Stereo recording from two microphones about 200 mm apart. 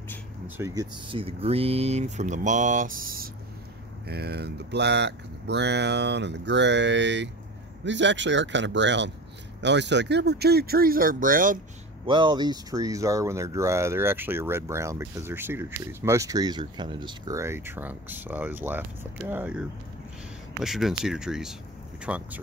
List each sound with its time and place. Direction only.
0.6 s speech: 15° right (ahead or behind)
1.0 s speech: 25° right (ahead or behind); by 11.6 s 40° right (ahead or behind)
12.1 s speech: 25° right (ahead or behind); by 22.4 s 5° right (ahead or behind)